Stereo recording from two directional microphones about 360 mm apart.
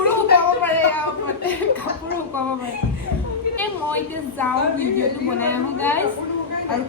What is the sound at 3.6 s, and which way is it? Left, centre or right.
A woman's voice, centre.